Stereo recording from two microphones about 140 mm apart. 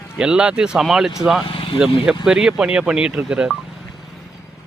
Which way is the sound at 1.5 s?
40° left (ahead or behind).